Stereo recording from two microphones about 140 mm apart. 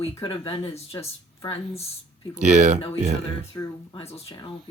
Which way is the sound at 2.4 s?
60° right (ahead or behind).